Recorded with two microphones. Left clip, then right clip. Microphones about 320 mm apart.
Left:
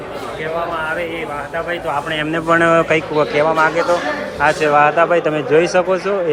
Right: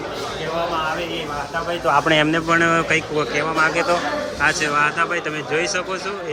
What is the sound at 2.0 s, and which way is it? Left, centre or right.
Speech, centre.